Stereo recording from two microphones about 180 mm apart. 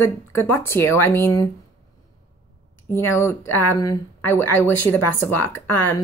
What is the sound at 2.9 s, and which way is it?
Speech, 15° left (ahead or behind).